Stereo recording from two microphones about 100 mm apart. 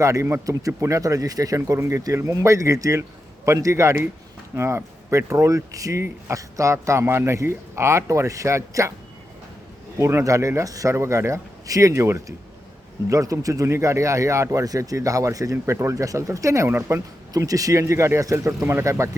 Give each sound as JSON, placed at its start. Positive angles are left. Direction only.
{"t": 0.0, "sound": "speech", "side_deg": -30}
{"t": 10.0, "sound": "speech", "side_deg": -30}